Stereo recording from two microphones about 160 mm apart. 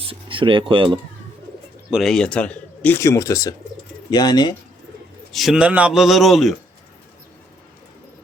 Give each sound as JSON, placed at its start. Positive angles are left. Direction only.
{"t": 0.0, "sound": "speech", "side_deg": -35}
{"t": 1.9, "sound": "speech", "side_deg": 0}
{"t": 5.3, "sound": "a man's voice", "side_deg": 0}